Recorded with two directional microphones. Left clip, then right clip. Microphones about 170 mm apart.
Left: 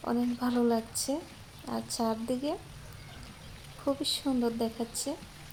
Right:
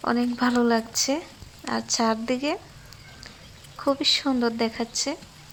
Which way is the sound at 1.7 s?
40° right (ahead or behind).